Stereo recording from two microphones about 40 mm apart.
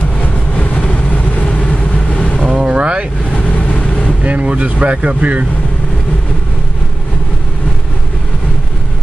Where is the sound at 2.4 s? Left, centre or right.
Centre.